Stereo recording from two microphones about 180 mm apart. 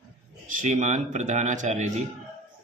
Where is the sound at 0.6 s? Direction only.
40° right (ahead or behind).